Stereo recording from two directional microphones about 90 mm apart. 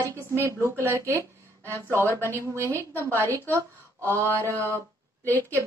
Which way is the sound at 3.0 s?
30° right (ahead or behind).